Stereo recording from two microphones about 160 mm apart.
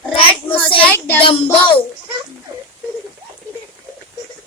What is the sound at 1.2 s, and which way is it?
Speech, 35° left (ahead or behind).